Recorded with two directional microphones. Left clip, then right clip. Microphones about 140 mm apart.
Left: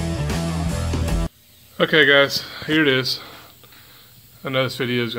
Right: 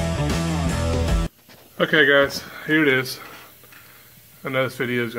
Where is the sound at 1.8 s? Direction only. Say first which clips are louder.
Left 2 dB; 10° left (ahead or behind).